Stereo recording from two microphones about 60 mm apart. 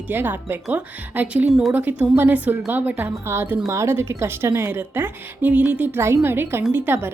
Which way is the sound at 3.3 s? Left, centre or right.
Right.